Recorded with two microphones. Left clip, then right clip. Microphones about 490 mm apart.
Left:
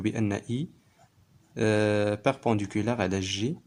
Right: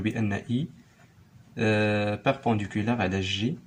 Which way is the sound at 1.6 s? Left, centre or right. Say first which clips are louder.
Even; left.